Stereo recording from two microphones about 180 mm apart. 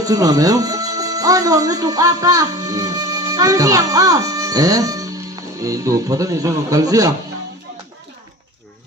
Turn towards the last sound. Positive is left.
turn(degrees=-20)  # may be behind; listen again after turning